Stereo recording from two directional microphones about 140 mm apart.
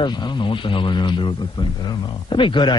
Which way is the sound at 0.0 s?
30° left (ahead or behind).